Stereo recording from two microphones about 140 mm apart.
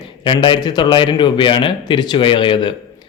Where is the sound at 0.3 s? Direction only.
35° left (ahead or behind).